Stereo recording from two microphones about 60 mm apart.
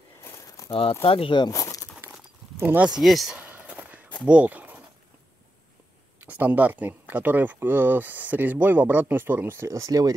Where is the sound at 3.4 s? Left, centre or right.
Right.